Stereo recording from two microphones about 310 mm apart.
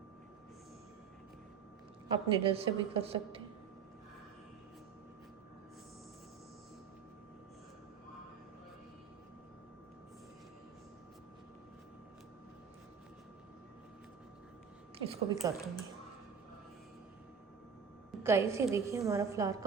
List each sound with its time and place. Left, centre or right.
2.0 s a woman's voice: centre
14.9 s a woman's voice: centre
18.2 s a woman's voice: centre